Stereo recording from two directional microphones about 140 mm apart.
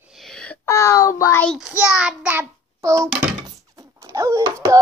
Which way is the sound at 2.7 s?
25° right (ahead or behind).